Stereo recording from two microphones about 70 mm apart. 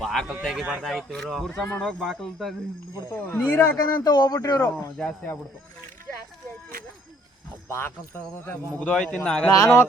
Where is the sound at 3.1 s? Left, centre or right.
Left.